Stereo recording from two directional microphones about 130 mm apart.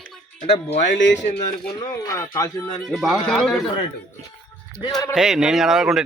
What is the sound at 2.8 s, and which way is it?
Speech, centre (ahead or behind).